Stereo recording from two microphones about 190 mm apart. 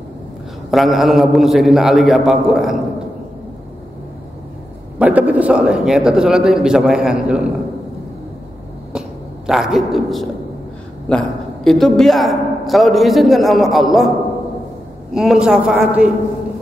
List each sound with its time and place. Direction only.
0.7 s a man's voice: centre (ahead or behind)
4.9 s a man's voice: 10° right (ahead or behind)
9.5 s a man's voice: centre (ahead or behind)
15.1 s a man's voice: 5° right (ahead or behind)